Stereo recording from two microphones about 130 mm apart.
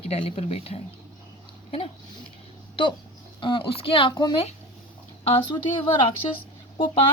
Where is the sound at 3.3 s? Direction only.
40° left (ahead or behind).